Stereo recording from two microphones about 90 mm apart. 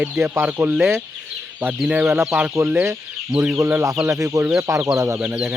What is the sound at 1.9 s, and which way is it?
Speech, 15° right (ahead or behind).